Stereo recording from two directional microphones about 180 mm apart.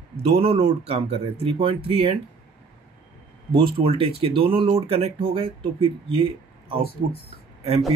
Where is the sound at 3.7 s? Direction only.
30° right (ahead or behind).